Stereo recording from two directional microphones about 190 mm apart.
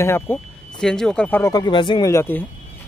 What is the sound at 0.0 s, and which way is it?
Speech, 10° left (ahead or behind).